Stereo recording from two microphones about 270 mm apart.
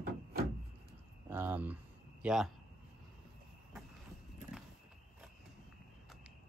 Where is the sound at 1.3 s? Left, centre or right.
Centre.